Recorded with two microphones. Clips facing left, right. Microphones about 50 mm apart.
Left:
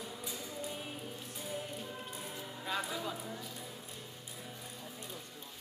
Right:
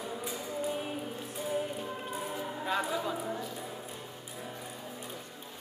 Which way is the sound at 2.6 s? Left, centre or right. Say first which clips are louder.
Right 5 dB; centre.